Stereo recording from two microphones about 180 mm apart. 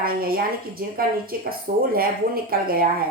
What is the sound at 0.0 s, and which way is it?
A woman's voice, 55° right (ahead or behind).